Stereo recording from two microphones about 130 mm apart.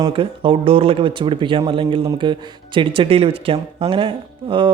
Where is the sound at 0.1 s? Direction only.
40° right (ahead or behind).